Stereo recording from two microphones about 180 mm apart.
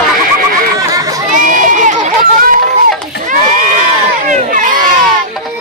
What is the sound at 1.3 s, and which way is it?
Run, 45° right (ahead or behind).